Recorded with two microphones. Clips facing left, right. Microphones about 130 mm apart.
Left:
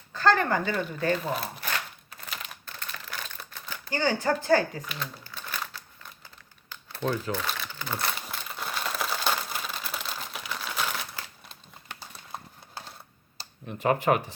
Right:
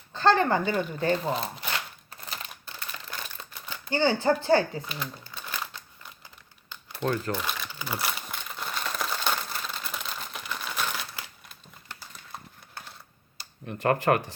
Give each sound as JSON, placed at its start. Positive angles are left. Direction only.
{"t": 0.1, "sound": "speech", "side_deg": -25}
{"t": 2.6, "sound": "a sound", "side_deg": -15}
{"t": 3.3, "sound": "typewriter", "side_deg": -20}
{"t": 4.4, "sound": "speech", "side_deg": -30}
{"t": 4.9, "sound": "crumpling", "side_deg": -10}
{"t": 13.7, "sound": "speech", "side_deg": 0}